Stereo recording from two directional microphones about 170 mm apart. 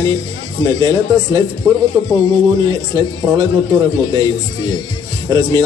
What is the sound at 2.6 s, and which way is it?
Speech, 25° right (ahead or behind).